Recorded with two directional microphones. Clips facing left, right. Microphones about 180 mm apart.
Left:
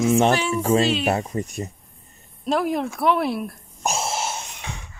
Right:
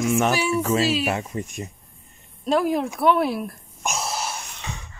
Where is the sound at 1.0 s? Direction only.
35° left (ahead or behind).